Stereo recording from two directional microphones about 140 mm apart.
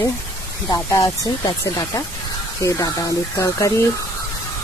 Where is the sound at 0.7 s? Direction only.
25° left (ahead or behind).